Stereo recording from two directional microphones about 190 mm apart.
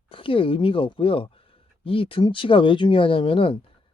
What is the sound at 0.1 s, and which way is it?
Speech, 30° left (ahead or behind).